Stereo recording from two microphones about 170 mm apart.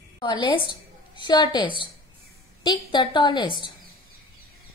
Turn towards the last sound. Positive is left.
turn(degrees=25)  # may be behind; listen again after turning